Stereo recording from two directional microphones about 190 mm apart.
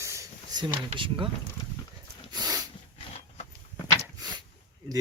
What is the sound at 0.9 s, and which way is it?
Speech, 25° right (ahead or behind).